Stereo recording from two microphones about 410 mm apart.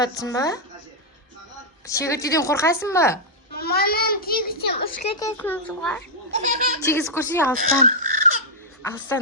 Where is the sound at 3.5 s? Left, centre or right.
Left.